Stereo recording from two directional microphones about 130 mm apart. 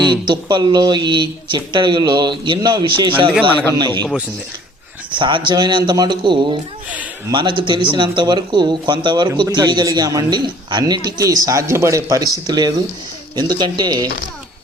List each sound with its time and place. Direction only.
0.1 s speech: 35° right (ahead or behind)
3.5 s a man's voice: 15° left (ahead or behind)
3.8 s speech: 35° right (ahead or behind)
5.1 s speech: 40° right (ahead or behind)